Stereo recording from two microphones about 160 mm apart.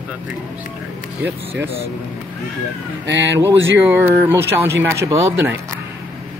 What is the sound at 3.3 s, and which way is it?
Speech, 15° right (ahead or behind).